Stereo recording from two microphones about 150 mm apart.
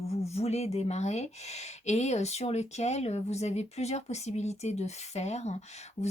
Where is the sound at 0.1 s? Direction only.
45° left (ahead or behind).